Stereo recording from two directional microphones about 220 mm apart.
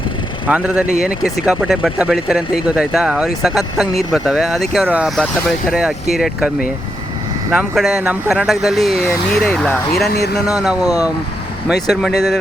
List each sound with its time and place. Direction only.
0.4 s speech: 5° right (ahead or behind)
7.5 s speech: centre (ahead or behind)
10.1 s speech: 45° left (ahead or behind)
10.8 s speech: 15° left (ahead or behind)
12.0 s speech: centre (ahead or behind)